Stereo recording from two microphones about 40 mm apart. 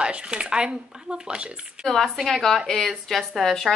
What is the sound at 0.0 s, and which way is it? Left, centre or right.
Speech, right.